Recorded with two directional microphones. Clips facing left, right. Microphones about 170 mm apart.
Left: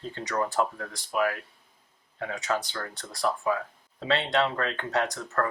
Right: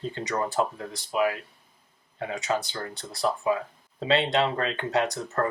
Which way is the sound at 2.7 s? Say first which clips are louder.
Right 2 dB; 25° right (ahead or behind).